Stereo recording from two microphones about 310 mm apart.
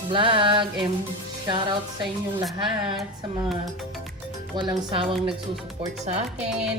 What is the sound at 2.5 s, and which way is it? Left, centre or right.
Speech, centre.